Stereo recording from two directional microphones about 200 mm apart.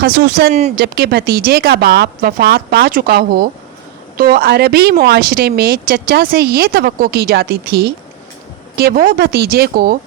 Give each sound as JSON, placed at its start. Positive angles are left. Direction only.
{"t": 0.0, "sound": "a woman's voice", "side_deg": -50}